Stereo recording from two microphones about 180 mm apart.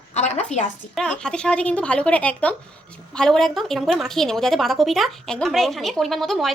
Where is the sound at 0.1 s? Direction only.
35° left (ahead or behind).